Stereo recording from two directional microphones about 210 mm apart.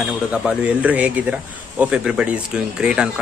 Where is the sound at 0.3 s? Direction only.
5° right (ahead or behind).